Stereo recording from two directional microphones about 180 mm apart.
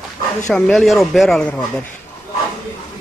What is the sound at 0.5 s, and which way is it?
Speech, 5° left (ahead or behind).